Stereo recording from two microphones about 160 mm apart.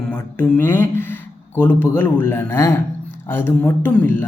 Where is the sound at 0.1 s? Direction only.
10° left (ahead or behind).